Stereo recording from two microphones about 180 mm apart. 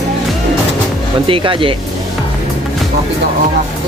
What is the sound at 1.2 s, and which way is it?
Speech, 30° right (ahead or behind).